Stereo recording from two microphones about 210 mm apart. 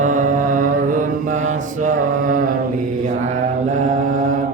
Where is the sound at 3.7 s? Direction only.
35° right (ahead or behind).